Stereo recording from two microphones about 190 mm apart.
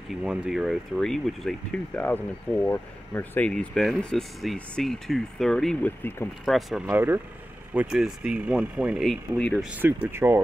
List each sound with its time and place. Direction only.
0.1 s speech: 5° right (ahead or behind)
6.5 s speech: 5° right (ahead or behind)
9.8 s speech: 10° right (ahead or behind)